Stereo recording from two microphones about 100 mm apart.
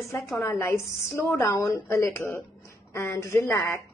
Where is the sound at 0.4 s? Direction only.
25° left (ahead or behind).